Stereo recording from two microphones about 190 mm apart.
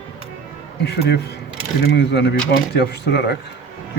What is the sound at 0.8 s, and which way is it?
Speech, 60° left (ahead or behind).